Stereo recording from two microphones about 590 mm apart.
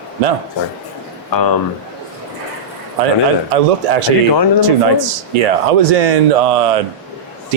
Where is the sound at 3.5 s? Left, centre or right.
Right.